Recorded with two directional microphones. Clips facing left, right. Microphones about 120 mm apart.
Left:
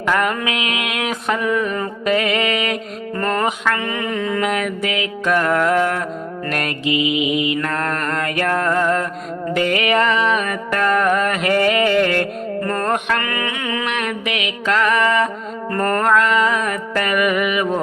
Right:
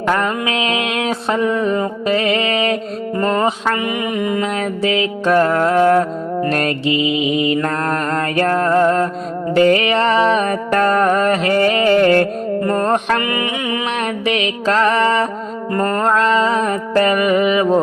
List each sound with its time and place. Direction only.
0.1 s music: 30° right (ahead or behind); by 4.4 s 15° right (ahead or behind)
4.4 s music: 30° right (ahead or behind)
13.1 s mantra: 20° right (ahead or behind)
13.8 s music: 35° right (ahead or behind)
15.7 s music: 20° right (ahead or behind)